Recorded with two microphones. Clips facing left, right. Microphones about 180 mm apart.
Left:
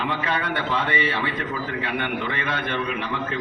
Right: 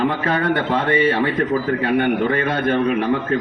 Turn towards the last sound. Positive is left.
turn(degrees=-45)  # may be behind; listen again after turning